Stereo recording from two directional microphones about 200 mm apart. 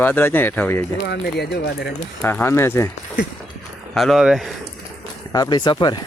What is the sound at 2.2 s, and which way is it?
Speech, 10° left (ahead or behind).